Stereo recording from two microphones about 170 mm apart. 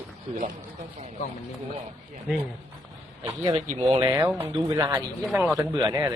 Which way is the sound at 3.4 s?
30° right (ahead or behind).